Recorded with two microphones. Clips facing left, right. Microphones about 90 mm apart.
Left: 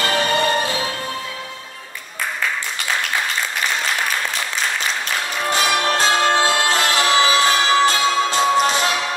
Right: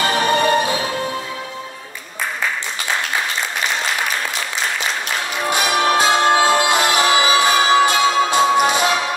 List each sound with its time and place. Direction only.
0.0 s music: 20° right (ahead or behind)
5.5 s music: 15° right (ahead or behind)